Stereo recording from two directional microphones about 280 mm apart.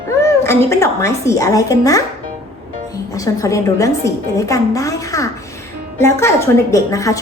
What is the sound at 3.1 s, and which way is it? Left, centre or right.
A woman's voice, centre.